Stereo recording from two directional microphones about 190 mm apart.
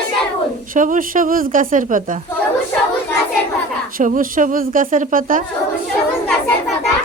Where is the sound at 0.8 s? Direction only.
45° right (ahead or behind).